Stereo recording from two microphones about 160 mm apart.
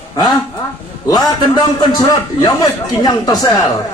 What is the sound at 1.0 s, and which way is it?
A man's voice, 25° left (ahead or behind).